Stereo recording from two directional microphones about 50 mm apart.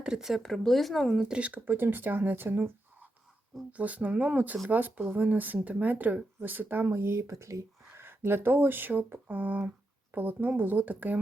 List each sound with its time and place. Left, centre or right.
0.0 s speech: centre
0.4 s speech: centre
1.4 s speech: right
1.6 s speech: right
3.7 s speech: right
6.9 s speech: right
8.0 s speech: right